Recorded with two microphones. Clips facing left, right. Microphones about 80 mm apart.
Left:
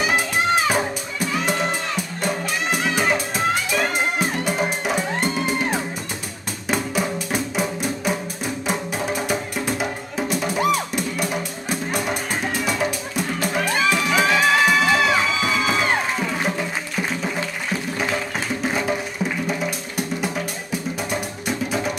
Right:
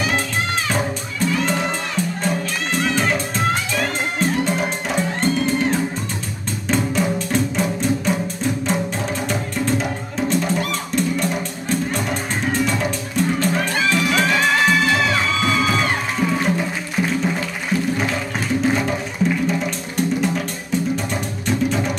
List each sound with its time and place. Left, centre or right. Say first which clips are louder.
0.7 s music: left 1 dB; centre
9.3 s music: right 2 dB; centre
17.9 s music: right 2 dB; centre
20.9 s music: right 3 dB; centre